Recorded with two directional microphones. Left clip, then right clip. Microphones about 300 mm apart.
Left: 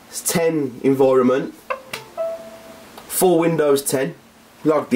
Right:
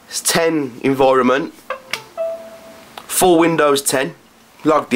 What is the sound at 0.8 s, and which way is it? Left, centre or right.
Speech, centre.